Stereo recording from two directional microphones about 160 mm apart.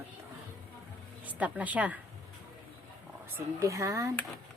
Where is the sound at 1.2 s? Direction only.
10° right (ahead or behind).